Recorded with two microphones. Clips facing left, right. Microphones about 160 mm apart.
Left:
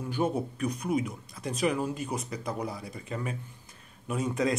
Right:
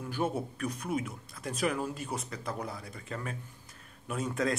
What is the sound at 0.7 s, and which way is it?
Speech, centre (ahead or behind).